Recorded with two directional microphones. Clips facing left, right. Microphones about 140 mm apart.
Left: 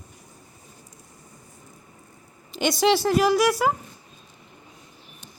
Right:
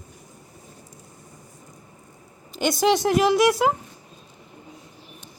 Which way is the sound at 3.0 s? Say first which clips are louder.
Right 1 dB; 20° right (ahead or behind).